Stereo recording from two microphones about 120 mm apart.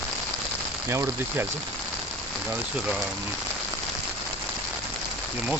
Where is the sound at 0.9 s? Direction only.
20° right (ahead or behind).